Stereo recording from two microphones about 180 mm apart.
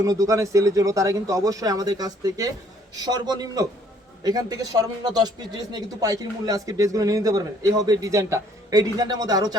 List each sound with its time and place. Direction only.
0.0 s speech: 20° right (ahead or behind)